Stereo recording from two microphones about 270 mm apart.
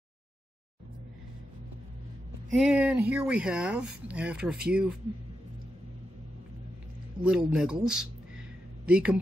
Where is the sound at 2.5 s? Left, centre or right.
Centre.